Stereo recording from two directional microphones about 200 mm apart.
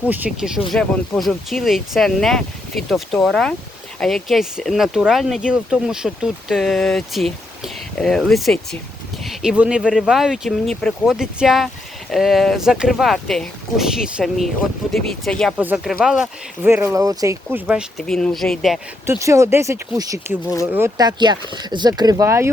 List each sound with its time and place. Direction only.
0.1 s speech: 5° right (ahead or behind)
16.2 s speech: 10° right (ahead or behind)
19.0 s speech: 15° right (ahead or behind)